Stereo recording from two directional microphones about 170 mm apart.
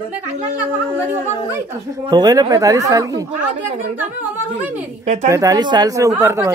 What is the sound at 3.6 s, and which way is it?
Speech, 50° right (ahead or behind).